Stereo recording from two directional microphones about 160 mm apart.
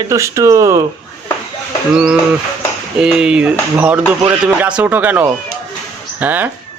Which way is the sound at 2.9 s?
5° right (ahead or behind).